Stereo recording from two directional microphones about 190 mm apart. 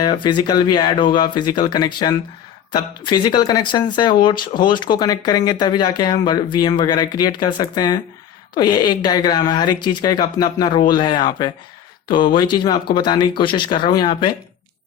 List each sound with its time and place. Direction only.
0.0 s speech: 25° left (ahead or behind)